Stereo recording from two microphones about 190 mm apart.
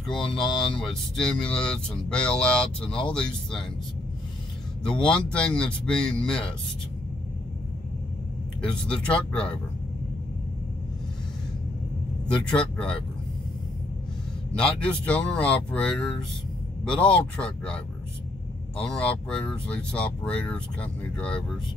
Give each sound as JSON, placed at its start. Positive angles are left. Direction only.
{"t": 0.1, "sound": "speech", "side_deg": 25}
{"t": 0.4, "sound": "speech", "side_deg": 0}
{"t": 5.0, "sound": "speech", "side_deg": 5}
{"t": 8.5, "sound": "speech", "side_deg": 5}
{"t": 12.4, "sound": "speech", "side_deg": 5}
{"t": 14.8, "sound": "speech", "side_deg": 5}
{"t": 18.9, "sound": "speech", "side_deg": 5}